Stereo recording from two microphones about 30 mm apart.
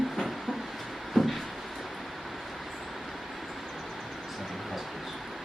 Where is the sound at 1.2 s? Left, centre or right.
Centre.